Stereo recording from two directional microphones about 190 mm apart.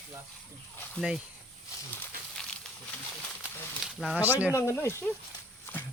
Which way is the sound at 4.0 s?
Centre (ahead or behind).